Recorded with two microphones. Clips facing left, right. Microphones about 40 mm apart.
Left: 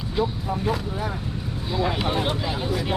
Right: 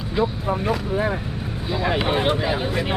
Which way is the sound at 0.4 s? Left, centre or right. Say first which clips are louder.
Right 3 dB; right.